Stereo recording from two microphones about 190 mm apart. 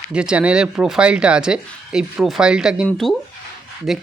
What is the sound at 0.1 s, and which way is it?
Speech, 5° right (ahead or behind).